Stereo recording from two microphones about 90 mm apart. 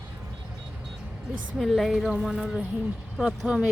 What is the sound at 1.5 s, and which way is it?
A woman's voice, centre (ahead or behind).